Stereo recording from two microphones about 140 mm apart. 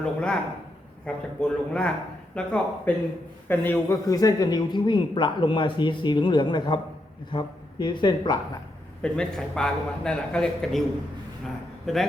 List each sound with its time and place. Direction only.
0.0 s a man's voice: 5° left (ahead or behind); by 8.4 s 30° left (ahead or behind)
9.0 s a man's voice: 5° left (ahead or behind)